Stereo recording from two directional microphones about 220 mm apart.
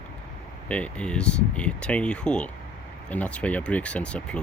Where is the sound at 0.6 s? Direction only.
5° left (ahead or behind).